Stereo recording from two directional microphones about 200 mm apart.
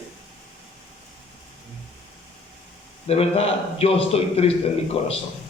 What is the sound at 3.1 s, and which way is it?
A man's voice, 30° left (ahead or behind).